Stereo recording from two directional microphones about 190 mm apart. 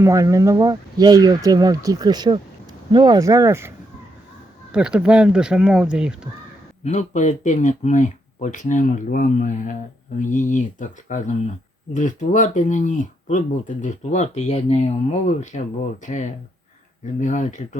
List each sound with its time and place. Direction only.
0.0 s speech: 15° right (ahead or behind)
4.7 s speech: 5° right (ahead or behind)
6.8 s speech: 40° left (ahead or behind)